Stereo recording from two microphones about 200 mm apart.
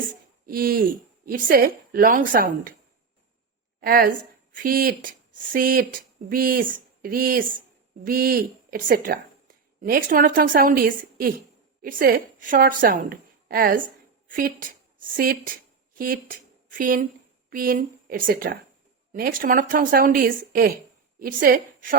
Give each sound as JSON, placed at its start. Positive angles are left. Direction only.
{"t": 0.4, "sound": "speech", "side_deg": -45}
{"t": 3.8, "sound": "a woman's voice", "side_deg": -45}